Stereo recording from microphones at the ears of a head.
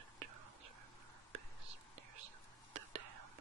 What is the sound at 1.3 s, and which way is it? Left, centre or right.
Whispering, right.